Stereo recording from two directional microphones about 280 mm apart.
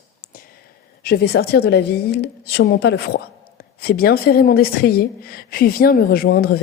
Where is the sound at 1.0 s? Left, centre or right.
Left.